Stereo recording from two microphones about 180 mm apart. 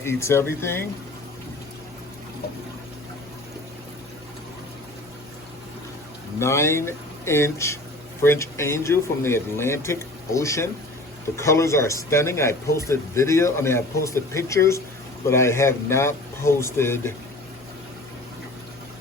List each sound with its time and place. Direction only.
0.0 s speech: 15° left (ahead or behind)
6.4 s speech: 15° left (ahead or behind)